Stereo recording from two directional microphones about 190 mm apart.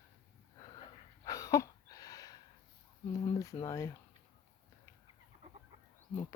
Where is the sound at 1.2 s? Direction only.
20° left (ahead or behind).